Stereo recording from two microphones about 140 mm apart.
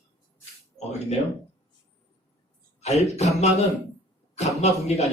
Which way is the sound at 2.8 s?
50° left (ahead or behind).